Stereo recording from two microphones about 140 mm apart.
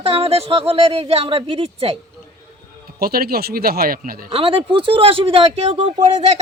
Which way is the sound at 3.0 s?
90° right.